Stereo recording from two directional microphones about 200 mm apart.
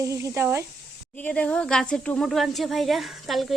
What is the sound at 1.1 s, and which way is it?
Speech, 5° left (ahead or behind).